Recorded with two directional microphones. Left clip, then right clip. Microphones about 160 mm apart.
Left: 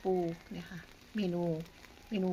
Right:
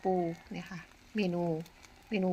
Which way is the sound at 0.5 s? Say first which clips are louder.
Right 3 dB; 15° right (ahead or behind).